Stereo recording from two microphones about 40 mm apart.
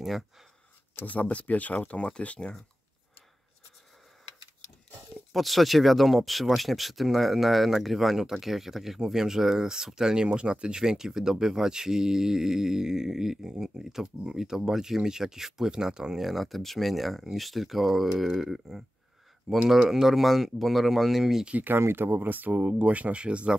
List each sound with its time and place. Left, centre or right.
1.0 s speech: left
1.9 s speech: left
5.3 s speech: centre
14.0 s speech: right
14.4 s speech: centre
16.2 s speech: centre
21.7 s speech: right